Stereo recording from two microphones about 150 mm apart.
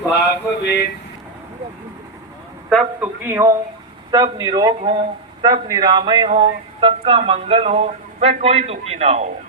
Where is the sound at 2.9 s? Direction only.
15° right (ahead or behind); by 9.3 s 45° right (ahead or behind).